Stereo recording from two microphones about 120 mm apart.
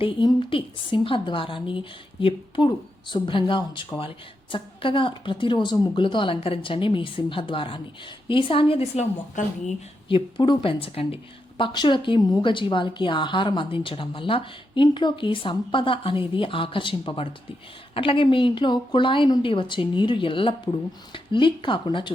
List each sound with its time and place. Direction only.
0.0 s a woman's voice: 45° left (ahead or behind)
10.1 s a woman's voice: 45° left (ahead or behind)